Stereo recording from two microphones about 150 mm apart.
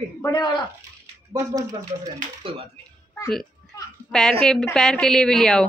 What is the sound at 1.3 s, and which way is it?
Speech, 20° right (ahead or behind).